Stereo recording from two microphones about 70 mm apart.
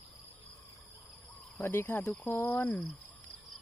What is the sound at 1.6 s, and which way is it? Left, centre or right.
Speech, left.